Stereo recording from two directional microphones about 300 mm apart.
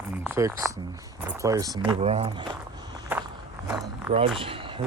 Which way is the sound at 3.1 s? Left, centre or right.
Centre.